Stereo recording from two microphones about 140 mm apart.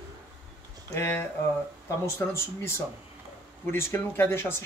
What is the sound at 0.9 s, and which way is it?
Speech, 20° left (ahead or behind).